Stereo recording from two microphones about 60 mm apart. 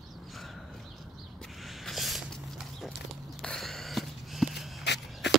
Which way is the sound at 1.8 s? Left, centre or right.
Centre.